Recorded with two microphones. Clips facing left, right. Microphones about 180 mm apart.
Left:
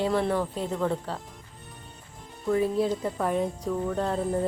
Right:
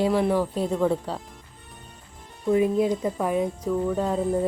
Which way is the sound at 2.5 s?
15° right (ahead or behind).